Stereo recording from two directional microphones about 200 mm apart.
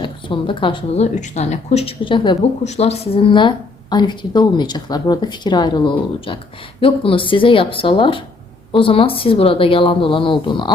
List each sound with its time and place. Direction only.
0.0 s speech: 25° left (ahead or behind)